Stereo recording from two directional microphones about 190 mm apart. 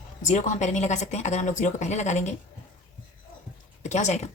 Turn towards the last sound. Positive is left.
turn(degrees=35)  # may be behind; listen again after turning